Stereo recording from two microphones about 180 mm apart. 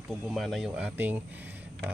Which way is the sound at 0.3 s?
Centre (ahead or behind).